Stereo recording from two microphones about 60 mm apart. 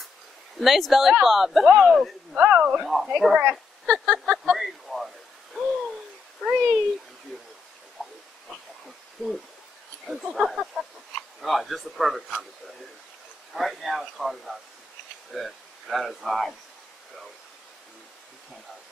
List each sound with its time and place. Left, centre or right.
0.6 s speech: centre
2.3 s speech: right
2.8 s speech: centre
3.8 s a sound: centre
4.6 s a sound: centre
6.4 s a child's voice: centre
8.5 s a sound: centre
10.3 s speech: centre
13.5 s speech: centre